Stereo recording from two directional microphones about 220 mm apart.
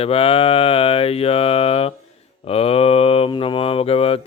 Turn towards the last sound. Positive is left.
turn(degrees=25)  # may be behind; listen again after turning